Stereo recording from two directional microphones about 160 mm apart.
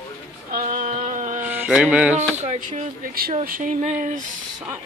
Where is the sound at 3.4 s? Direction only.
60° right (ahead or behind).